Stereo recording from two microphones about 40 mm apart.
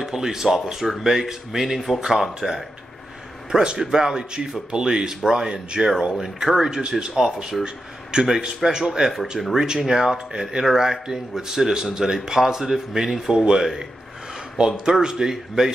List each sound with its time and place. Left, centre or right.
0.0 s speech: centre
3.6 s speech: centre
9.7 s speech: centre
14.9 s speech: centre